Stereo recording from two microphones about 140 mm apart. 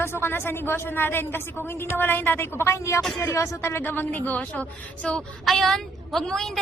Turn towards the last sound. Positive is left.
turn(degrees=5)  # may be behind; listen again after turning